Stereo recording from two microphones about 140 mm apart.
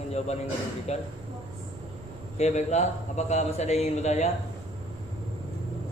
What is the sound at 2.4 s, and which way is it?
A man's voice, 55° left (ahead or behind).